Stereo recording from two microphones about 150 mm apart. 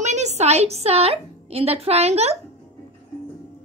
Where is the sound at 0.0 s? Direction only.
50° right (ahead or behind).